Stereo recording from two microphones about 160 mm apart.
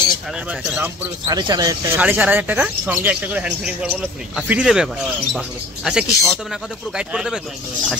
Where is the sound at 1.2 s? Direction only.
25° right (ahead or behind).